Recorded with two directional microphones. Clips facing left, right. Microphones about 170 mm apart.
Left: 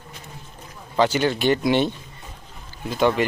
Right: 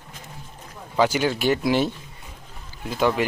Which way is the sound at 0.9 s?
10° right (ahead or behind).